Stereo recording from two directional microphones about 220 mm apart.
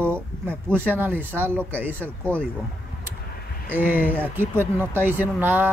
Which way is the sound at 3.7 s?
10° right (ahead or behind).